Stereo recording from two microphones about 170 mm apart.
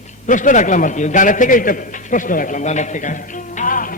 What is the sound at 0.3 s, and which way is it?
A man's voice, 50° left (ahead or behind).